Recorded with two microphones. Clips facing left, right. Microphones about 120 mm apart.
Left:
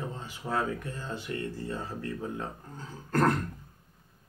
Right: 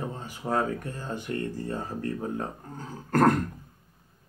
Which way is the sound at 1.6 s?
45° right (ahead or behind).